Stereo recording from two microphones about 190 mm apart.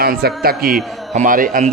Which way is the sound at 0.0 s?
55° right (ahead or behind).